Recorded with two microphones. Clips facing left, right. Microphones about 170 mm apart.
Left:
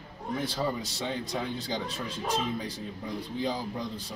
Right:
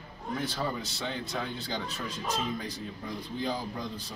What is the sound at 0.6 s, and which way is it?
Speech, 15° left (ahead or behind).